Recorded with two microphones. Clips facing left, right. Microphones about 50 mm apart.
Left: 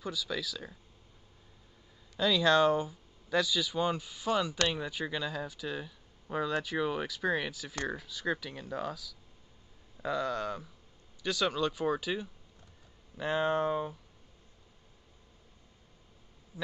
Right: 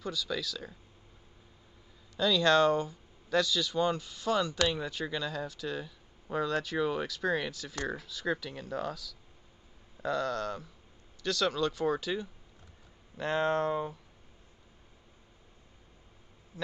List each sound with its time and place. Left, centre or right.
0.0 s speech: centre
2.1 s speech: centre